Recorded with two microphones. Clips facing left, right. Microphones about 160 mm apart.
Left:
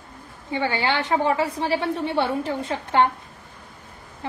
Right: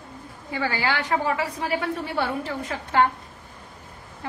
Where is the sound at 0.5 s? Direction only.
25° left (ahead or behind).